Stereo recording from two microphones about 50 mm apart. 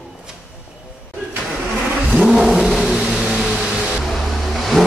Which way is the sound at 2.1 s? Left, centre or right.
Centre.